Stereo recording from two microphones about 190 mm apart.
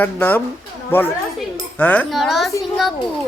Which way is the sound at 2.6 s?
Centre (ahead or behind).